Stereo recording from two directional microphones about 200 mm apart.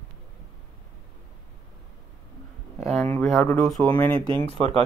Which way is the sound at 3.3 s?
5° left (ahead or behind).